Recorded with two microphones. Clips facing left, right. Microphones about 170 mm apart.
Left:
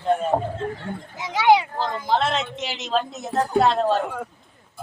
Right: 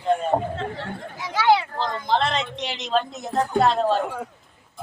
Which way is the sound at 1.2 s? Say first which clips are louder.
Left 2 dB; 20° left (ahead or behind).